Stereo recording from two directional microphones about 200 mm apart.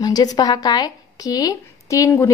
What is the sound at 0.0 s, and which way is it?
Speech, 20° left (ahead or behind).